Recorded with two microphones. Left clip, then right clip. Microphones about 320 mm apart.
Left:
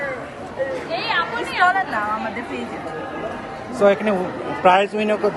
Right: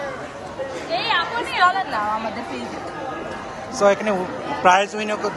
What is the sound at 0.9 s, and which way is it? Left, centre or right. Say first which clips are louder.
Speech: right 2 dB; right.